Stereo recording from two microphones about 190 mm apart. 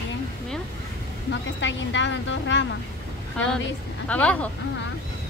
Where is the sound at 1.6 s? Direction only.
75° left (ahead or behind).